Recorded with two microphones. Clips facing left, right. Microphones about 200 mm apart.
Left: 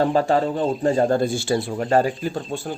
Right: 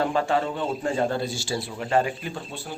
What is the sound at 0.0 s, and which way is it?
A man's voice, 40° left (ahead or behind).